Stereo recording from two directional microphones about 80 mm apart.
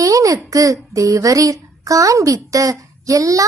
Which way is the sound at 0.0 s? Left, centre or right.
Right.